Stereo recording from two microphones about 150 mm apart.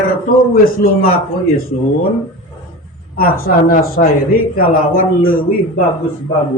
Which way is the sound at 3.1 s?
80° left.